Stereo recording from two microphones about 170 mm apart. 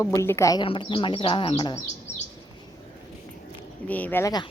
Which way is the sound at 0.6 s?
30° left (ahead or behind).